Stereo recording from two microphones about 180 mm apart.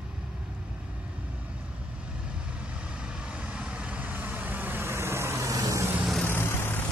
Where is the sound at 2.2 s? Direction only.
5° right (ahead or behind).